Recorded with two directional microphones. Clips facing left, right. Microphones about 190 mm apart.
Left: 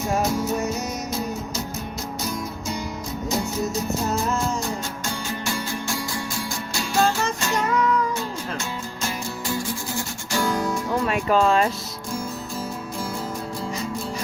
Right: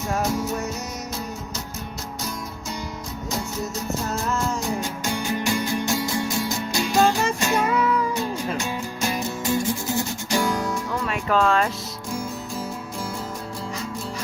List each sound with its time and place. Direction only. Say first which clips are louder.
5.5 s music: right 4 dB; 20° right (ahead or behind)
11.1 s speech: left 1 dB; 15° left (ahead or behind)